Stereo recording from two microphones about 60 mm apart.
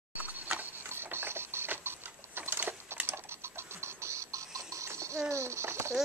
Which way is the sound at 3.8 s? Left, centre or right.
Right.